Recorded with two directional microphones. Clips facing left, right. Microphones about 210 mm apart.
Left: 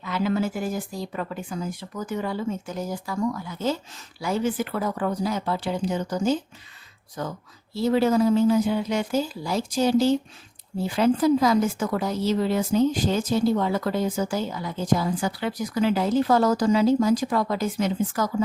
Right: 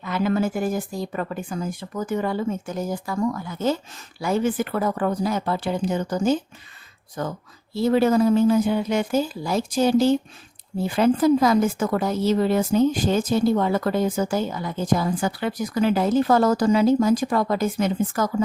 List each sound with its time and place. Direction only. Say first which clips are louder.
0.0 s a woman's voice: right 2 dB; 50° right (ahead or behind)